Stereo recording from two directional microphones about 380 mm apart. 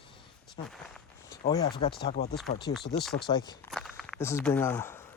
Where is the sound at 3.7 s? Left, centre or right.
Centre.